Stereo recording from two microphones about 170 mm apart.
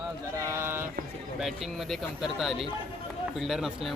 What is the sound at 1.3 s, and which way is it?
Speech, centre (ahead or behind).